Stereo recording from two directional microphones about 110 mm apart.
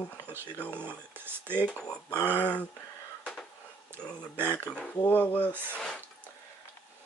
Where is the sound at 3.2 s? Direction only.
5° left (ahead or behind).